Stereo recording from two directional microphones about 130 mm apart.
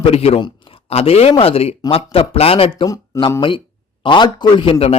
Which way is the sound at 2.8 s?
25° left (ahead or behind).